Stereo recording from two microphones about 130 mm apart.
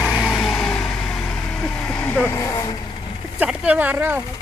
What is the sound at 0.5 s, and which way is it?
Vehicle, 15° left (ahead or behind).